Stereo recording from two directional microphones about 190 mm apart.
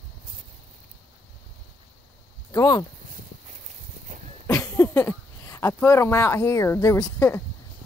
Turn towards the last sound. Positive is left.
turn(degrees=15)  # may be behind; listen again after turning